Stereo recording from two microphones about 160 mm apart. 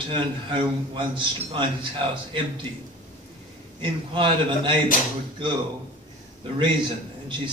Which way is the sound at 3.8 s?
30° right (ahead or behind).